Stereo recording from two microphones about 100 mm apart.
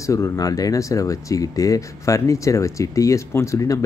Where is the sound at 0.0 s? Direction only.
30° left (ahead or behind).